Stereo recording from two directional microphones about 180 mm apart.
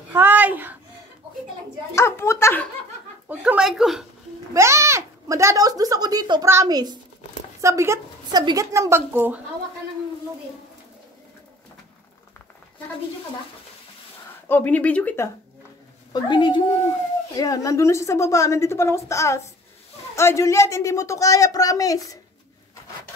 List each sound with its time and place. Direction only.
0.1 s a child's voice: 10° right (ahead or behind)
2.0 s a woman's voice: 15° left (ahead or behind)
3.3 s speech: 5° right (ahead or behind)
4.6 s a woman's voice: 15° right (ahead or behind)
14.5 s a woman's voice: 10° left (ahead or behind)
16.1 s a woman's voice: 25° left (ahead or behind)